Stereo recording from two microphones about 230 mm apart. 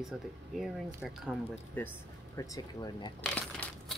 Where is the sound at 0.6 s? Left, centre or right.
Centre.